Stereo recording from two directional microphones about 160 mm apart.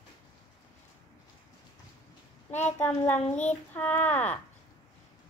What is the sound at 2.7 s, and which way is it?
Speech, 10° left (ahead or behind).